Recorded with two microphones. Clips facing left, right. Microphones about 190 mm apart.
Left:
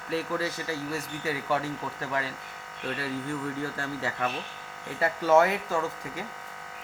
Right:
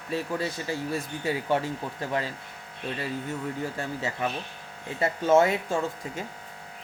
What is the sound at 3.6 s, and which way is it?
Speech, 20° right (ahead or behind).